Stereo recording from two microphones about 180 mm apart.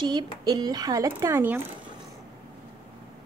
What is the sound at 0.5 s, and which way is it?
A woman's voice, 20° right (ahead or behind).